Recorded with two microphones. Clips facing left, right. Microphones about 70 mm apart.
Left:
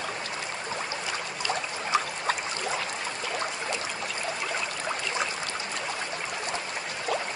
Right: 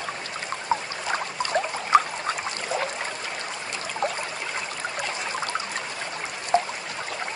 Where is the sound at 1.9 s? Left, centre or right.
Right.